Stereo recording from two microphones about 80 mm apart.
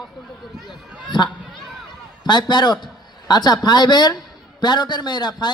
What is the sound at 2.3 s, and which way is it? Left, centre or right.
Speech, left.